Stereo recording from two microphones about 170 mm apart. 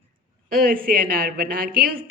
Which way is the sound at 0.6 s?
55° right (ahead or behind).